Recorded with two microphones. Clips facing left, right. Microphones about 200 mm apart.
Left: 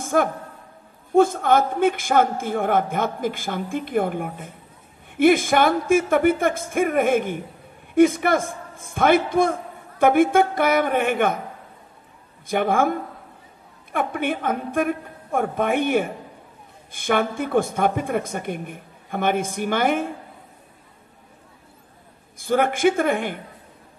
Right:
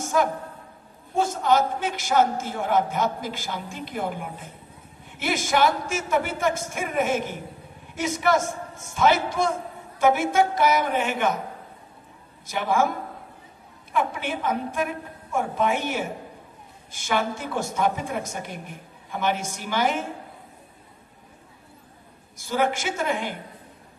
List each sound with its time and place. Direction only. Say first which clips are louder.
0.0 s a sound: left 2 dB; 55° left (ahead or behind)
1.1 s a woman's voice: left 5 dB; 55° left (ahead or behind)
12.4 s a woman's voice: left 3 dB; 55° left (ahead or behind)
13.9 s a woman's voice: left 3 dB; 55° left (ahead or behind)
22.4 s a woman's voice: left 6 dB; 55° left (ahead or behind)